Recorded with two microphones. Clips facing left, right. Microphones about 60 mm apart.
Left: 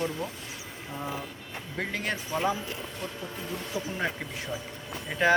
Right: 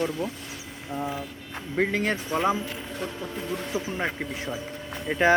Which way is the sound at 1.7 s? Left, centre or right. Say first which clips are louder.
Right 7 dB; right.